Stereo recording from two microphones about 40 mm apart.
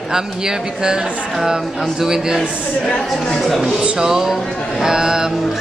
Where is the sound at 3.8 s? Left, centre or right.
Right.